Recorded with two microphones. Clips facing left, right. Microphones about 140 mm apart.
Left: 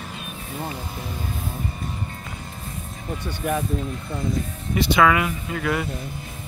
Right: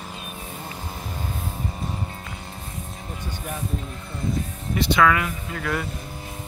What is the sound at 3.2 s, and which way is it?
Speech, 80° left.